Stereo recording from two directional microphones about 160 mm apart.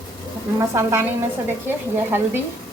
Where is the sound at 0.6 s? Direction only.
20° right (ahead or behind).